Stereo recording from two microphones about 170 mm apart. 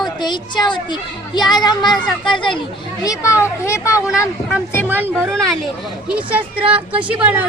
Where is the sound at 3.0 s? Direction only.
15° left (ahead or behind).